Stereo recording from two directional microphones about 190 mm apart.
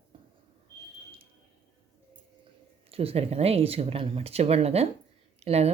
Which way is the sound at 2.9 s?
30° right (ahead or behind).